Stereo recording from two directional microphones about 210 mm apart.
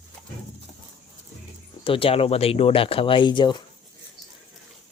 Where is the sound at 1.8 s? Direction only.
25° left (ahead or behind).